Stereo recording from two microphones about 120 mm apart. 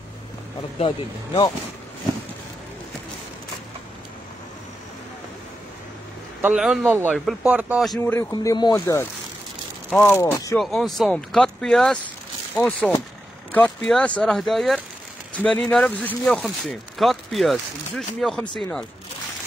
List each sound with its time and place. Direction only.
0.8 s speech: 40° left (ahead or behind)
6.4 s speech: 5° right (ahead or behind)
6.9 s speech: 15° right (ahead or behind)
8.0 s speech: 20° left (ahead or behind)
8.3 s speech: 35° left (ahead or behind)
8.7 s speech: 20° left (ahead or behind)
9.9 s speech: 5° left (ahead or behind)
10.3 s speech: 25° left (ahead or behind)
10.6 s speech: centre (ahead or behind)
16.3 s speech: centre (ahead or behind)